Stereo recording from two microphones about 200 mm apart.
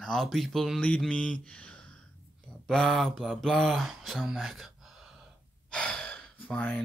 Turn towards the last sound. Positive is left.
turn(degrees=5)  # may be behind; listen again after turning